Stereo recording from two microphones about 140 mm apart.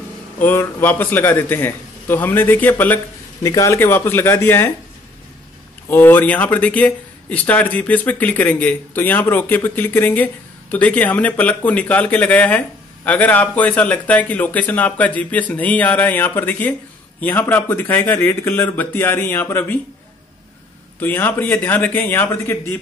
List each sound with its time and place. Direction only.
0.4 s speech: 15° left (ahead or behind)
3.4 s speech: 25° left (ahead or behind)
5.9 s speech: 15° left (ahead or behind)
21.0 s speech: 15° left (ahead or behind)